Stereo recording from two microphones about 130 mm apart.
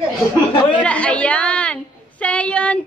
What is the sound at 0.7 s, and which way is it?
A woman's voice, 10° left (ahead or behind).